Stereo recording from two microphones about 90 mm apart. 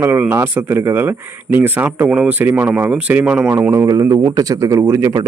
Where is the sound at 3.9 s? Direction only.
40° right (ahead or behind).